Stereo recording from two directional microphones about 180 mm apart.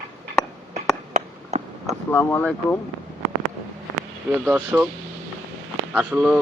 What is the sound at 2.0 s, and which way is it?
Speech, 10° left (ahead or behind).